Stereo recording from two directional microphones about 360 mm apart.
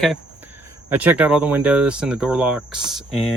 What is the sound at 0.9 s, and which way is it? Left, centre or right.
Speech, centre.